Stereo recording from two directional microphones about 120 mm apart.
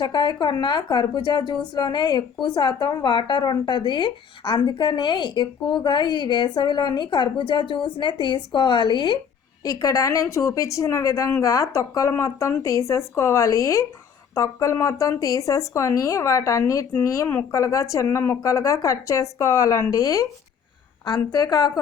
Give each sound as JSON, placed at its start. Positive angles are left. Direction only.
{"t": 0.0, "sound": "speech", "side_deg": 35}
{"t": 9.6, "sound": "a woman's voice", "side_deg": 30}